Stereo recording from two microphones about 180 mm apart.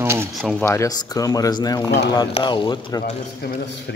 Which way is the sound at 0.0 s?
15° right (ahead or behind).